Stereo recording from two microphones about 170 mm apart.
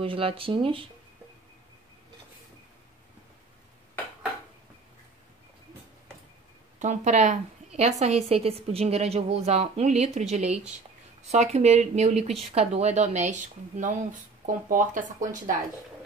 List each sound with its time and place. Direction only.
0.0 s a woman's voice: 30° right (ahead or behind)
6.8 s a woman's voice: 45° right (ahead or behind)